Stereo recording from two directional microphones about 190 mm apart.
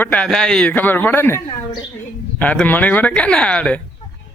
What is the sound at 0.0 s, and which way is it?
Speech, 5° left (ahead or behind).